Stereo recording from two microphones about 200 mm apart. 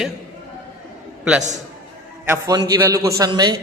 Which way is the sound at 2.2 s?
10° right (ahead or behind).